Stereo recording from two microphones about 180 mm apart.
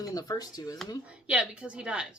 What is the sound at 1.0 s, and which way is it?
A woman's voice, 5° right (ahead or behind).